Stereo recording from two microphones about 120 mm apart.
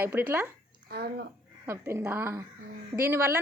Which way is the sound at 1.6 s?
20° right (ahead or behind).